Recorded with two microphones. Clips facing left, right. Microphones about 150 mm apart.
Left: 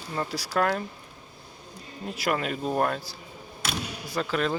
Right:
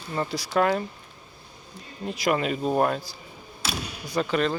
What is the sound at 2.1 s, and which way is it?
Speech, centre (ahead or behind).